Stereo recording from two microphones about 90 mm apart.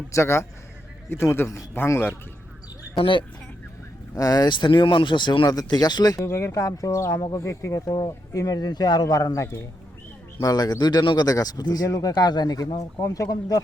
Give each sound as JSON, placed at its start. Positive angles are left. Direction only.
{"t": 0.1, "sound": "a man's voice", "side_deg": 30}
{"t": 3.0, "sound": "speech", "side_deg": 70}
{"t": 4.1, "sound": "speech", "side_deg": 40}
{"t": 5.5, "sound": "speech", "side_deg": 45}
{"t": 6.2, "sound": "speech", "side_deg": 30}
{"t": 11.3, "sound": "speech", "side_deg": 45}